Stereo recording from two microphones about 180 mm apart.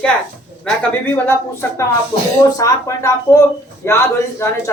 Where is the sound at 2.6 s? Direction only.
15° left (ahead or behind).